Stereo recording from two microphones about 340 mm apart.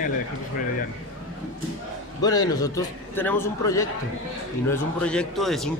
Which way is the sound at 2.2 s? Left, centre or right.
Centre.